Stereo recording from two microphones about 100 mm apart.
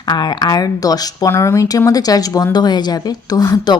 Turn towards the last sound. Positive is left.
turn(degrees=40)  # may be behind; listen again after turning